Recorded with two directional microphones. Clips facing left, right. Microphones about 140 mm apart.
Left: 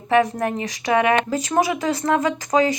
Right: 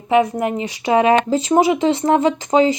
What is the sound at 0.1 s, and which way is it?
Speech, 20° right (ahead or behind).